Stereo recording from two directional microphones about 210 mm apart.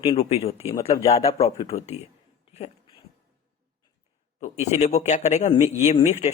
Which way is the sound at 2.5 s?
30° left (ahead or behind).